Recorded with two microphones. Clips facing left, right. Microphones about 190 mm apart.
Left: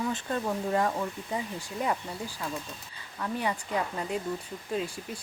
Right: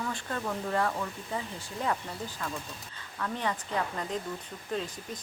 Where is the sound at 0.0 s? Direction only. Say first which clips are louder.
Left 4 dB; 20° left (ahead or behind).